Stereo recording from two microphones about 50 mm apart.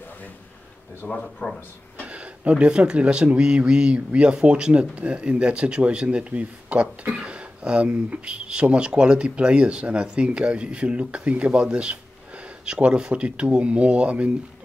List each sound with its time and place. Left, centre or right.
1.0 s speech: left
2.0 s a sound: right
2.5 s speech: right